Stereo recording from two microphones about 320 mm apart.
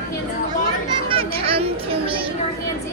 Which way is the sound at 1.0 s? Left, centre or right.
Centre.